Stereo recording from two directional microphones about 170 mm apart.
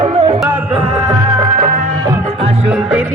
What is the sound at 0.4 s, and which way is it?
Music, 10° right (ahead or behind).